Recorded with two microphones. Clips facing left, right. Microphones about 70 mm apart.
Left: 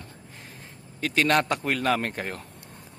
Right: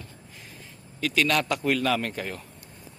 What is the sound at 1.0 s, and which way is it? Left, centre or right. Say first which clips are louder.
A man's voice: left 2 dB; left.